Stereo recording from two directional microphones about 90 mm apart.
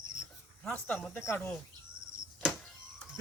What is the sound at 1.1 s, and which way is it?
Speech, 25° left (ahead or behind).